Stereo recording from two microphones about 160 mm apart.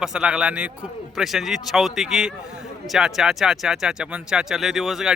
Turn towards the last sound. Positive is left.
turn(degrees=0)  # may be behind; listen again after turning